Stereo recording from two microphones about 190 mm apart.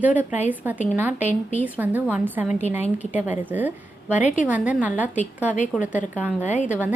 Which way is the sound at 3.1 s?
10° right (ahead or behind).